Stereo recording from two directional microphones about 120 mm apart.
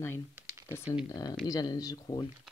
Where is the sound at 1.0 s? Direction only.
30° left (ahead or behind).